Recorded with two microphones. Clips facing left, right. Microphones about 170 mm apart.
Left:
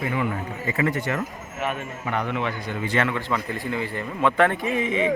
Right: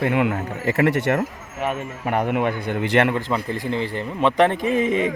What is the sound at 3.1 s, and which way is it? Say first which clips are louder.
Speech: right 4 dB; 45° right (ahead or behind).